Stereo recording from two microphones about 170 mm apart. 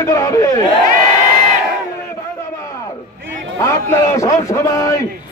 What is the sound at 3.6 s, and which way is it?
A man's voice, 15° left (ahead or behind).